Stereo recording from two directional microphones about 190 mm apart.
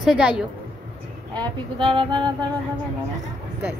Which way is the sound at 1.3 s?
25° right (ahead or behind).